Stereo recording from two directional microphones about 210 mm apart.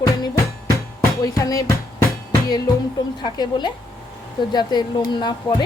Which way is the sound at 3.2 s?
20° left (ahead or behind).